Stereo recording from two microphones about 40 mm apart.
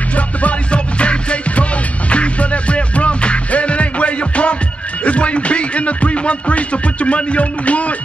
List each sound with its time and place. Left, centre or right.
0.1 s music: left